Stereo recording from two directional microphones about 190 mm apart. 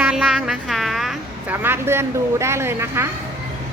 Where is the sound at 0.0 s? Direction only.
5° right (ahead or behind).